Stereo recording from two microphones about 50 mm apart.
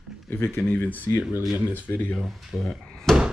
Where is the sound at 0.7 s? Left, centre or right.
Left.